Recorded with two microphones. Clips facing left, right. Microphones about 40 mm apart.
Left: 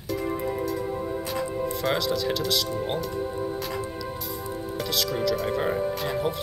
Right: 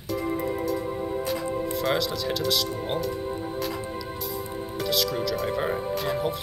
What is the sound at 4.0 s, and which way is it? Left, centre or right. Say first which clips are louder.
Speech: even; centre.